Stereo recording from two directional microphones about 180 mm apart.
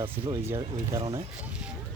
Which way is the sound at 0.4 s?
15° right (ahead or behind).